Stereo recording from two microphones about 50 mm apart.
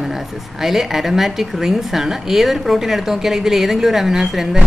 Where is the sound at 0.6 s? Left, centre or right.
Centre.